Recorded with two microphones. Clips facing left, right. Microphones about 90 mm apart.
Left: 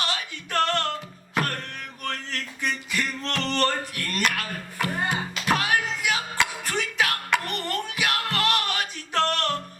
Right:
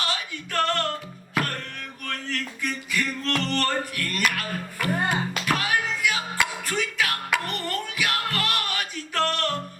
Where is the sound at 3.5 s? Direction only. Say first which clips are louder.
Left 1 dB; 25° left (ahead or behind).